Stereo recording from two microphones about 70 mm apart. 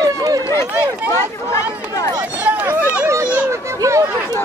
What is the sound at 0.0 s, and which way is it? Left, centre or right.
Run, right.